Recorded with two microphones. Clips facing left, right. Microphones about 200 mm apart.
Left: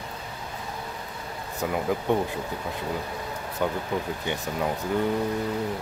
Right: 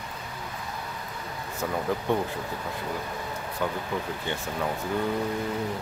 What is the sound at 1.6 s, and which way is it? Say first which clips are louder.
Speech: left 2 dB; 15° left (ahead or behind).